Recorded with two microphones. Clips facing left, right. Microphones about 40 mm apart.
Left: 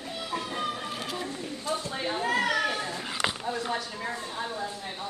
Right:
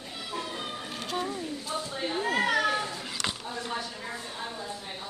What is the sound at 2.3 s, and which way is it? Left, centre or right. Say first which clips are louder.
Children playing: even; right.